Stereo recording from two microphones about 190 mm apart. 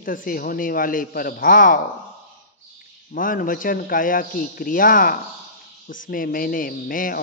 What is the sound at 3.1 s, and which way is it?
Speech, 45° left (ahead or behind).